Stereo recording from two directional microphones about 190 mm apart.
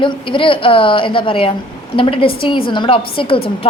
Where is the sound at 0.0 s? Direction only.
25° left (ahead or behind).